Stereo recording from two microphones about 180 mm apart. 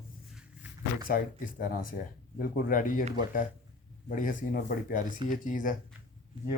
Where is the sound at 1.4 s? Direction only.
50° left (ahead or behind).